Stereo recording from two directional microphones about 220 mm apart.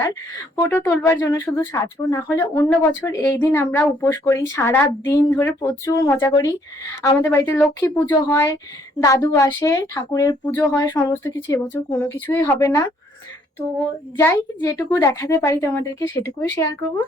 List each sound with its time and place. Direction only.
0.5 s a woman's voice: 10° left (ahead or behind)
14.2 s a woman's voice: 10° left (ahead or behind)